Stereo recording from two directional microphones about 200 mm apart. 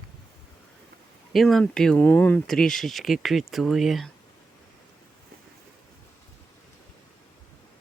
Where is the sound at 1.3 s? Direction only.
Centre (ahead or behind).